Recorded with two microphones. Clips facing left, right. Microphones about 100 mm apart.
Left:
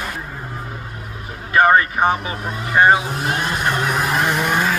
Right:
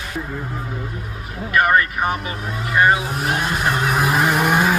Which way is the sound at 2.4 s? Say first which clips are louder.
Left 1 dB; centre (ahead or behind).